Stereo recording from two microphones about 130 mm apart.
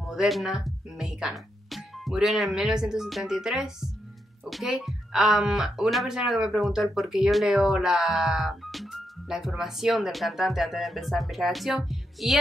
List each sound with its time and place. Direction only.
0.0 s speech: centre (ahead or behind)